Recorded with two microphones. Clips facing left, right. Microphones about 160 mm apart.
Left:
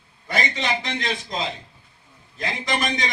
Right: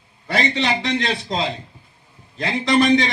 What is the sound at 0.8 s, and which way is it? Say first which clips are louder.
Speech: right 6 dB; 30° right (ahead or behind).